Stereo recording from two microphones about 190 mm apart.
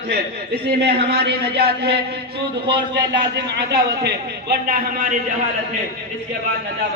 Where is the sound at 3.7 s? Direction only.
60° right (ahead or behind).